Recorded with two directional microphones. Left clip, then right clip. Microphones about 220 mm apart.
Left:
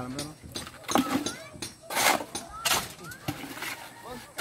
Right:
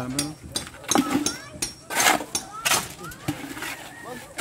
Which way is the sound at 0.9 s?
10° left (ahead or behind).